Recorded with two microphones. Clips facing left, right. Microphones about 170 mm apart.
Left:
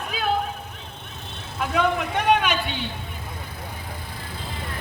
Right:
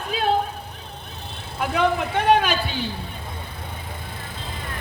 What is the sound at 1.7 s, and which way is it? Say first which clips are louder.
A man's voice: right 1 dB; 30° right (ahead or behind).